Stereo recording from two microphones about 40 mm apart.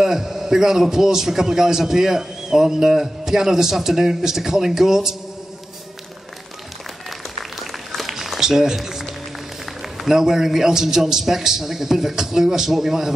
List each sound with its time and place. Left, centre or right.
0.0 s a man's voice: centre
7.1 s a sound: centre
9.8 s a man's voice: centre